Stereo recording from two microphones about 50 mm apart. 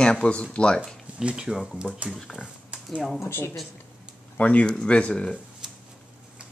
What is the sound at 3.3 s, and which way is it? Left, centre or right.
Speech, left.